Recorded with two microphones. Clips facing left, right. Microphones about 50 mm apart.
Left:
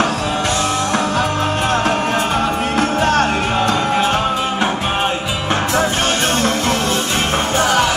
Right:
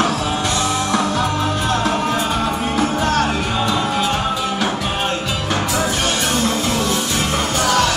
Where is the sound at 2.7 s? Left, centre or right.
Left.